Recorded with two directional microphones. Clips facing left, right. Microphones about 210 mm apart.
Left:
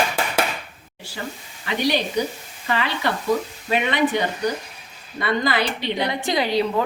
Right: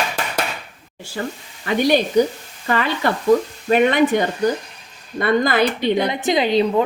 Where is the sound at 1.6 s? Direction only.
50° right (ahead or behind).